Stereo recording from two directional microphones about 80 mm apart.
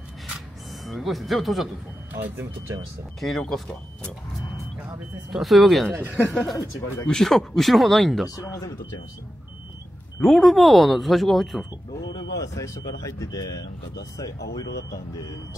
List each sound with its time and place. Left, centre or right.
0.8 s speech: centre
2.1 s speech: right
3.2 s speech: centre
5.3 s speech: centre
5.9 s speech: right
6.3 s speech: centre
10.2 s speech: centre
12.4 s speech: left